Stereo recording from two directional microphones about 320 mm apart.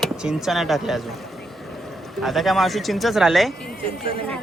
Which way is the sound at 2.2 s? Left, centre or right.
Centre.